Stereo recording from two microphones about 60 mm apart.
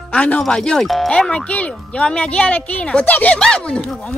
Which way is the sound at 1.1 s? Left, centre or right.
Centre.